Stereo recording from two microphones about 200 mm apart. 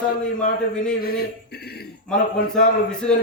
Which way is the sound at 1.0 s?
50° left (ahead or behind).